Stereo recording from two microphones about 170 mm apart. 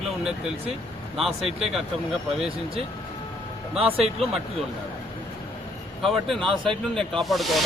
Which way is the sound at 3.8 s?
35° right (ahead or behind).